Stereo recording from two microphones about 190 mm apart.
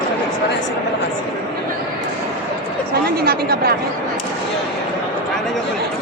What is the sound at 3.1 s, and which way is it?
Speech, 55° right (ahead or behind).